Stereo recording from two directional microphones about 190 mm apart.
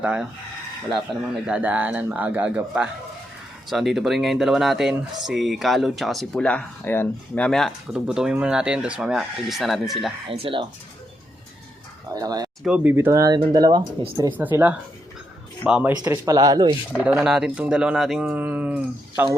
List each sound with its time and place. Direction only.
0.0 s speech: 5° right (ahead or behind)
10.2 s speech: 30° right (ahead or behind)
12.1 s speech: 20° right (ahead or behind)
12.6 s speech: 10° right (ahead or behind)
14.3 s speech: 10° right (ahead or behind)
16.0 s speech: 20° right (ahead or behind)
16.9 s speech: centre (ahead or behind)